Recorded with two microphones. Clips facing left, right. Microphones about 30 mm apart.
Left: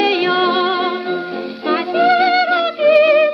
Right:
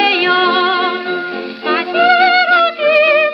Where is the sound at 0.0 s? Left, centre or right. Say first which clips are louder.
Right 3 dB; right.